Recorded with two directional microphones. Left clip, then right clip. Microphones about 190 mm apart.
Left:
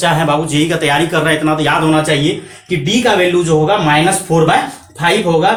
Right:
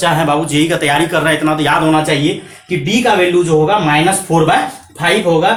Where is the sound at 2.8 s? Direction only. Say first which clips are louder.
Even; 10° right (ahead or behind).